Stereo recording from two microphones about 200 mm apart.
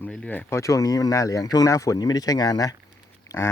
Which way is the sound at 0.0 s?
5° left (ahead or behind).